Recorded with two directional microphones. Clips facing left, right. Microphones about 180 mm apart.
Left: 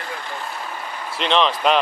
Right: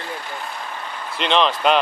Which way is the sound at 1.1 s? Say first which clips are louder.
Even; centre (ahead or behind).